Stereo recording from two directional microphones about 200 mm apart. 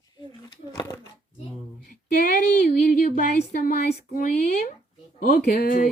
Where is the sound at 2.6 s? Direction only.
45° left (ahead or behind).